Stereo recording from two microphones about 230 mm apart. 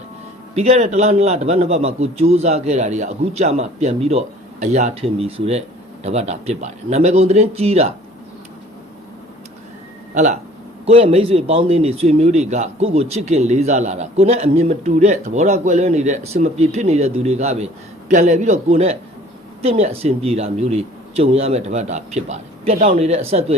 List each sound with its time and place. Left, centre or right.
0.5 s a man's voice: right
10.8 s a man's voice: right